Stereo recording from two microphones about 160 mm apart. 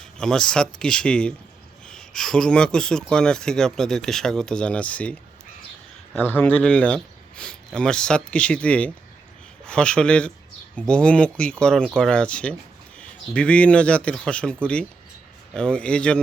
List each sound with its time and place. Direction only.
0.0 s speech: 5° left (ahead or behind)
6.1 s speech: 10° left (ahead or behind)